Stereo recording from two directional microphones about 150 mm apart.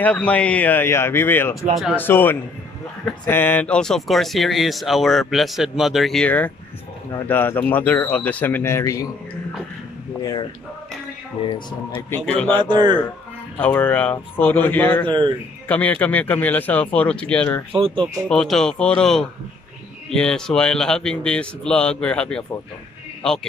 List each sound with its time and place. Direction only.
0.0 s speech: 10° left (ahead or behind)
11.4 s speech: 30° left (ahead or behind)
12.3 s speech: 10° left (ahead or behind)
12.6 s a man's voice: 30° right (ahead or behind)
13.6 s speech: 10° left (ahead or behind)
15.0 s speech: 30° right (ahead or behind)
15.7 s speech: 10° left (ahead or behind)
17.7 s a man's voice: 35° right (ahead or behind)
18.3 s speech: 5° left (ahead or behind)